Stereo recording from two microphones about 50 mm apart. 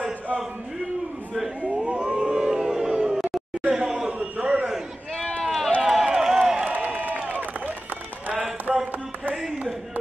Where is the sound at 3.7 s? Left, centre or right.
Centre.